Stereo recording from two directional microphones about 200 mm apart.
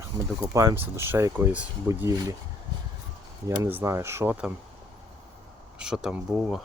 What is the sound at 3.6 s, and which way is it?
Speech, 15° right (ahead or behind).